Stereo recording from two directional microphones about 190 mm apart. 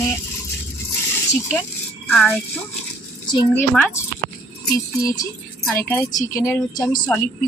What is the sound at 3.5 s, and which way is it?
Speech, 10° left (ahead or behind).